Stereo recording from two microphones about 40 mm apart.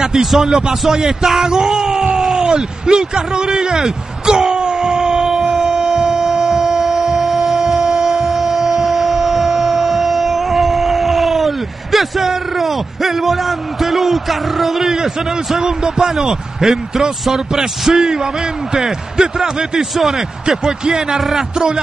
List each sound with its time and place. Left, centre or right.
0.0 s a sound: centre
15.5 s a man's voice: centre
20.6 s a man's voice: centre